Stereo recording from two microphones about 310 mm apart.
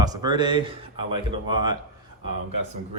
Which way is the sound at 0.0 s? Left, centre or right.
Centre.